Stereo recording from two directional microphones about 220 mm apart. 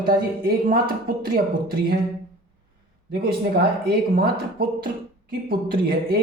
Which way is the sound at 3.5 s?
45° right (ahead or behind).